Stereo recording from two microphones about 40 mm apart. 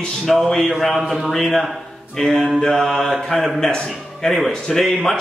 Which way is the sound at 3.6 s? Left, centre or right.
Centre.